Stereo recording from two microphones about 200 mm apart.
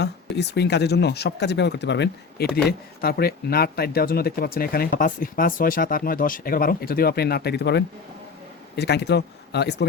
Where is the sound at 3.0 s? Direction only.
50° left (ahead or behind).